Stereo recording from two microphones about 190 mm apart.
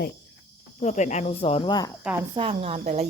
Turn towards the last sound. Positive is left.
turn(degrees=-35)  # may be behind; listen again after turning